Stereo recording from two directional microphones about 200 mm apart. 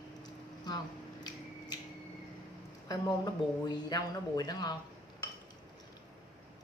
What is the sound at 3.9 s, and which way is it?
Speech, 20° left (ahead or behind).